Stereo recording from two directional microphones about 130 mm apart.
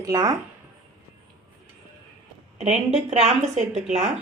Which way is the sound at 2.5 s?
55° right (ahead or behind).